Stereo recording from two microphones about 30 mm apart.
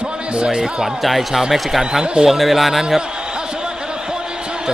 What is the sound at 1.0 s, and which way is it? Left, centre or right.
Speech, centre.